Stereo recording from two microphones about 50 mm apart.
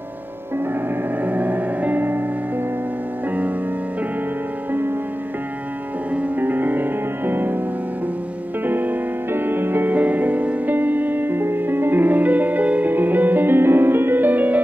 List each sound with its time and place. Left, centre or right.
1.2 s music: right
6.4 s music: right
8.6 s music: right